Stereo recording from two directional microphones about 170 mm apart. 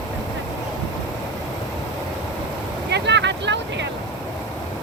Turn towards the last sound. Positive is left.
turn(degrees=-90)